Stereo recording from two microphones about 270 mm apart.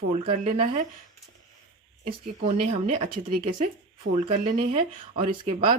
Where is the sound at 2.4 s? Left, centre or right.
Right.